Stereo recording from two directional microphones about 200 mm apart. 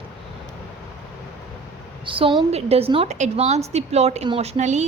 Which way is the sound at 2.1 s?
25° right (ahead or behind).